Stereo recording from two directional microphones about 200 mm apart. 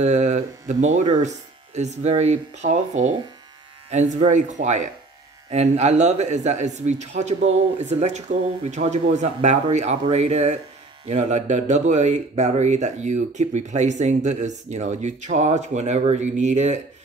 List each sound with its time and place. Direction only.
0.0 s speech: 35° right (ahead or behind)